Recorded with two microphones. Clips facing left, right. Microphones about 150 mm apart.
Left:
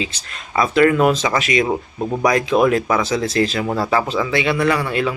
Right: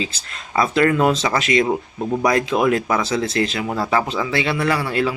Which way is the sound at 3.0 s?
25° right (ahead or behind).